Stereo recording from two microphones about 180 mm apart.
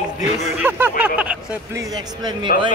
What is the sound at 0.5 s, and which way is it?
Speech, 10° right (ahead or behind).